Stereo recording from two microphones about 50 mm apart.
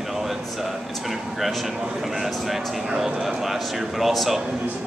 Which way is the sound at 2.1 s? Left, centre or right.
Centre.